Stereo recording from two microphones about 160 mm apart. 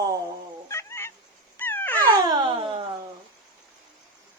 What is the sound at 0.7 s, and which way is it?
Fowl, 15° left (ahead or behind).